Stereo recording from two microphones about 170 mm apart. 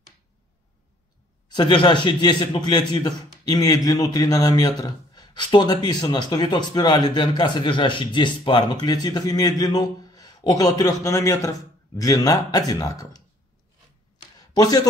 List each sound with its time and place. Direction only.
1.5 s a man's voice: 25° left (ahead or behind)
14.5 s speech: 20° left (ahead or behind)